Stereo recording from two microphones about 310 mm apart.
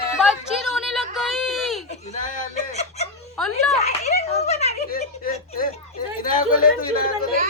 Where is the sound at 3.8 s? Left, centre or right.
Left.